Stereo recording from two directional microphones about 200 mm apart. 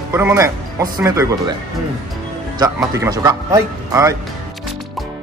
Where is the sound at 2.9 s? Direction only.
15° right (ahead or behind).